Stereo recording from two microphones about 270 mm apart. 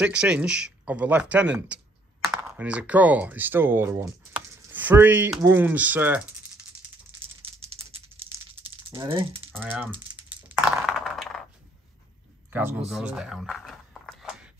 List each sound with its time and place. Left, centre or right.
0.0 s speech: centre
7.6 s rattle: right
9.5 s speech: centre
10.8 s a sound: centre
12.4 s speech: centre
12.9 s a sound: centre